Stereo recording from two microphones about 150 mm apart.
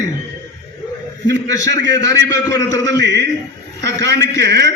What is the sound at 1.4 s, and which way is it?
A man's voice, 20° left (ahead or behind).